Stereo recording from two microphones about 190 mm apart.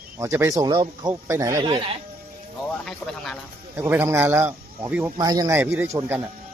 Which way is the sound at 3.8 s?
10° right (ahead or behind).